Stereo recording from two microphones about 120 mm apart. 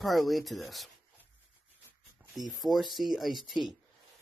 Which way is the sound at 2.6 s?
Centre (ahead or behind).